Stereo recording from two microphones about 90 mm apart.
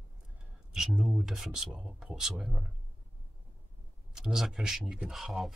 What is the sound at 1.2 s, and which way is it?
Speech, 5° right (ahead or behind).